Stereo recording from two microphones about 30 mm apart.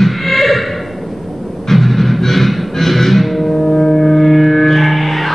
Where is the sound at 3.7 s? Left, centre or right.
Left.